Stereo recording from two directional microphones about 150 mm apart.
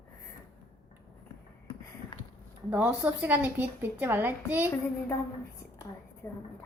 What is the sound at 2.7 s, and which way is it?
A woman's voice, 5° right (ahead or behind).